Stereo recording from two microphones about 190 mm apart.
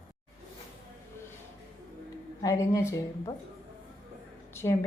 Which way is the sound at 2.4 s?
15° left (ahead or behind).